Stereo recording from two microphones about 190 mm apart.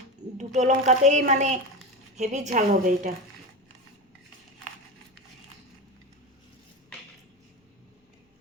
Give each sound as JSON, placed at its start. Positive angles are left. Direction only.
{"t": 0.3, "sound": "a woman's voice", "side_deg": -40}